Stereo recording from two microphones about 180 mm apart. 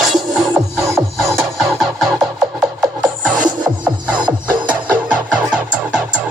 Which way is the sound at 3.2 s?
5° right (ahead or behind).